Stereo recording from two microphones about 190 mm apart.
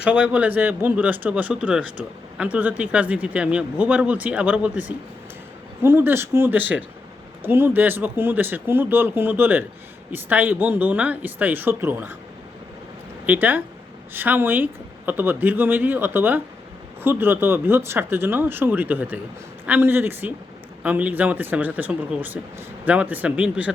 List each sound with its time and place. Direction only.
0.0 s speech: 5° right (ahead or behind)
13.2 s speech: 10° right (ahead or behind)